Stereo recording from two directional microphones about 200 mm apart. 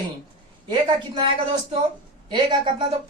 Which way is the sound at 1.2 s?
25° right (ahead or behind).